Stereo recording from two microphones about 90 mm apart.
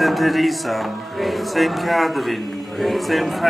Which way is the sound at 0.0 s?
Centre (ahead or behind).